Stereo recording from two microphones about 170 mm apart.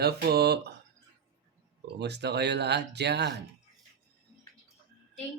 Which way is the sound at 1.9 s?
80° right.